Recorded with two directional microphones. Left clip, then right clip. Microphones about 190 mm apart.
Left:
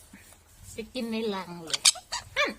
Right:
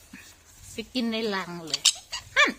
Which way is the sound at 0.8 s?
20° right (ahead or behind).